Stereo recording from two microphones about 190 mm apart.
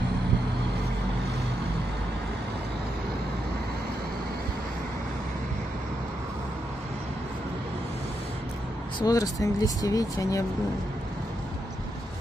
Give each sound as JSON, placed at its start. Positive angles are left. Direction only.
{"t": 9.0, "sound": "speech", "side_deg": 20}